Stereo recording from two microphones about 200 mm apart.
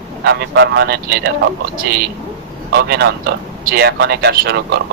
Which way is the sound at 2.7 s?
55° right (ahead or behind).